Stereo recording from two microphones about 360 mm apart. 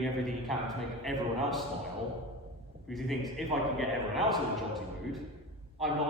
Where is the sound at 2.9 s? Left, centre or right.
Centre.